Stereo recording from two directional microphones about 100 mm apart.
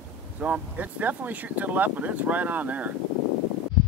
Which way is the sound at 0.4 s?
15° right (ahead or behind).